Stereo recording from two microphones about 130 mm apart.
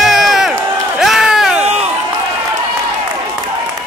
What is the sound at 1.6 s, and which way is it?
Run, 55° right (ahead or behind).